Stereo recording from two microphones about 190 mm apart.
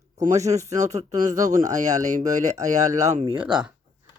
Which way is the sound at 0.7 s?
35° right (ahead or behind).